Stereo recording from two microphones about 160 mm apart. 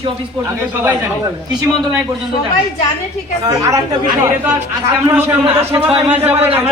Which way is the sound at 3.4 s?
20° right (ahead or behind).